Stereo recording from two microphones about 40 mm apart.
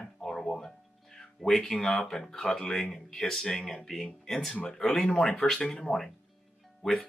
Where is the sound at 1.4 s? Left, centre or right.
Centre.